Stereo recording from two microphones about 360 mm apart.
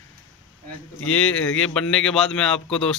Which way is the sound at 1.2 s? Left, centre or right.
Centre.